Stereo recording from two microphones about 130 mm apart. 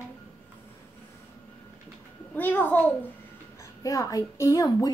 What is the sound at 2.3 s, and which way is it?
Speech, 15° left (ahead or behind).